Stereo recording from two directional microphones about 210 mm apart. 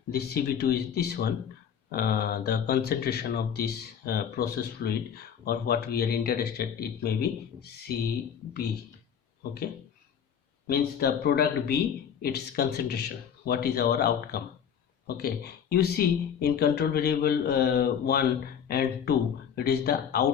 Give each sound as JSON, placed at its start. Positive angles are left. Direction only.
{"t": 0.1, "sound": "speech", "side_deg": 50}
{"t": 10.7, "sound": "speech", "side_deg": 50}
{"t": 15.7, "sound": "speech", "side_deg": 50}